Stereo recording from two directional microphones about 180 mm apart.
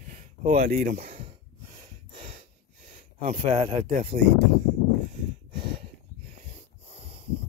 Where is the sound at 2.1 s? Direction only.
35° right (ahead or behind).